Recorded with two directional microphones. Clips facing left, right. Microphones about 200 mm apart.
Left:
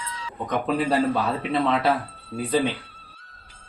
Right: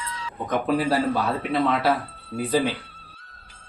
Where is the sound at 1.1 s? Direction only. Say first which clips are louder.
Even; centre (ahead or behind).